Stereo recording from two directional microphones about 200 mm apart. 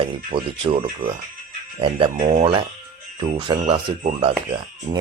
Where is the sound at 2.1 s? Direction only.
40° right (ahead or behind).